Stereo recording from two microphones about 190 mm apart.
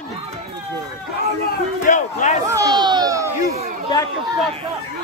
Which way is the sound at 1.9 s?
40° left (ahead or behind).